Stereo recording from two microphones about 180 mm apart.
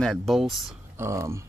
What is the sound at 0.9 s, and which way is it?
Speech, 15° right (ahead or behind).